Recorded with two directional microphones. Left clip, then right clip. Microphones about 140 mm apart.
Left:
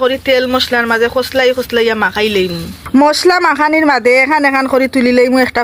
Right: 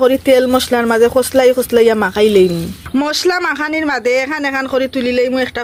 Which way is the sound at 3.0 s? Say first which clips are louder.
Left 7 dB; centre (ahead or behind).